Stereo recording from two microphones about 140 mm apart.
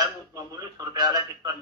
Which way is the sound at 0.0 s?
25° right (ahead or behind).